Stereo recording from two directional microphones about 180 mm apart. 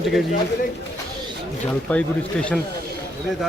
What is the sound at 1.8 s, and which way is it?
Speech, 5° left (ahead or behind).